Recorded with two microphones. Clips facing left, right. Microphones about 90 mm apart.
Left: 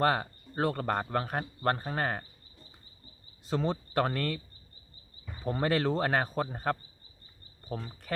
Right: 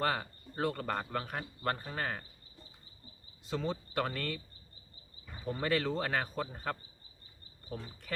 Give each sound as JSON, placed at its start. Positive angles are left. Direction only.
{"t": 0.0, "sound": "a man's voice", "side_deg": 45}
{"t": 3.5, "sound": "a man's voice", "side_deg": 45}
{"t": 5.5, "sound": "a man's voice", "side_deg": 45}